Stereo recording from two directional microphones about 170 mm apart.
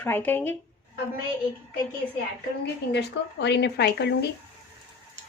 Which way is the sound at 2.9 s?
90° left.